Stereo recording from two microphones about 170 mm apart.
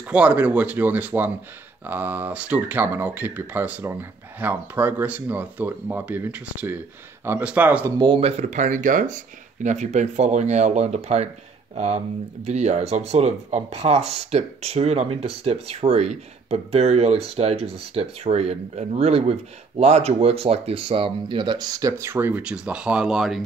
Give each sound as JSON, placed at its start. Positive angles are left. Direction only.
{"t": 0.0, "sound": "speech", "side_deg": -10}
{"t": 8.0, "sound": "speech", "side_deg": -30}